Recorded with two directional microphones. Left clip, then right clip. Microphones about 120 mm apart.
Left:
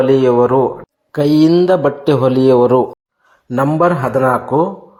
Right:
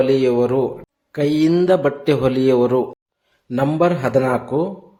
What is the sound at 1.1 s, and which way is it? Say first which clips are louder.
Speech: left 6 dB; 25° left (ahead or behind).